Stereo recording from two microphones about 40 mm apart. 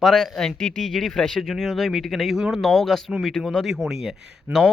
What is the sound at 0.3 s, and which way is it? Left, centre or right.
Speech, centre.